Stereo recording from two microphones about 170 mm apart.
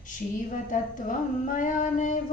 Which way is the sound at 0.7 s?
50° left (ahead or behind).